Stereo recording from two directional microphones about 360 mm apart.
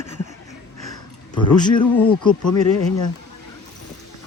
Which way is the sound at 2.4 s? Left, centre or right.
Left.